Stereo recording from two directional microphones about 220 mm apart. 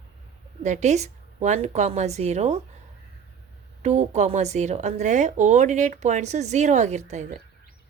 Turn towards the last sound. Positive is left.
turn(degrees=-30)  # may be behind; listen again after turning